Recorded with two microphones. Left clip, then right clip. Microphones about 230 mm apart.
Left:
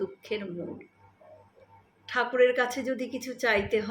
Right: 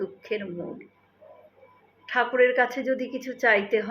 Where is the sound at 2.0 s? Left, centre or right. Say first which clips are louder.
Right 2 dB; centre.